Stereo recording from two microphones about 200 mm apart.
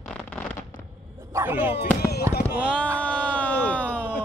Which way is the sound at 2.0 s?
55° left (ahead or behind).